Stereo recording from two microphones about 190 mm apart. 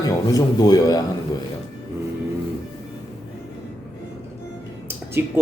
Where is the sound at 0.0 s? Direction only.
20° left (ahead or behind).